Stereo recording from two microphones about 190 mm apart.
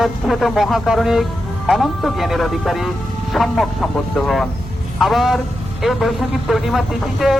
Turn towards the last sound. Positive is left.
turn(degrees=0)  # may be behind; listen again after turning